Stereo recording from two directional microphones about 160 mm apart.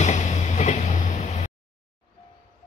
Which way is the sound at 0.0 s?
45° left (ahead or behind).